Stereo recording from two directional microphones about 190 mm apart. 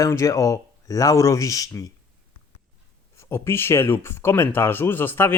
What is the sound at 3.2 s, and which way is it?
Speech, 15° left (ahead or behind).